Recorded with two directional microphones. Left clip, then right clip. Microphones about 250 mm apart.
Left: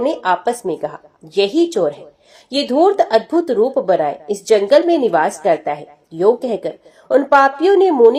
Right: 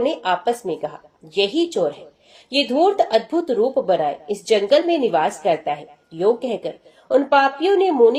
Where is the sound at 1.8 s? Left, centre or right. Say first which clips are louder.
Left 4 dB; centre.